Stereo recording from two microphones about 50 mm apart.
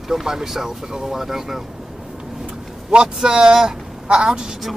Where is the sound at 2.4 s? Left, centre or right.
Right.